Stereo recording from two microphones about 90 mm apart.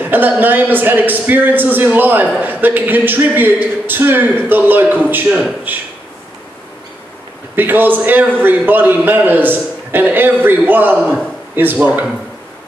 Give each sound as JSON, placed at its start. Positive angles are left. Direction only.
{"t": 0.0, "sound": "a man's voice", "side_deg": -20}
{"t": 7.5, "sound": "a man's voice", "side_deg": -20}